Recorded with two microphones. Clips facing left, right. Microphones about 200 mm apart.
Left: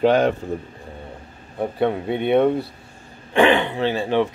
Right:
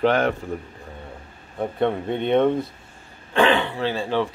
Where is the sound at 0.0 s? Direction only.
15° left (ahead or behind).